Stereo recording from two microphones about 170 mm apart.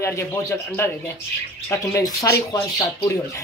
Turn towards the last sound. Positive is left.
turn(degrees=20)  # may be behind; listen again after turning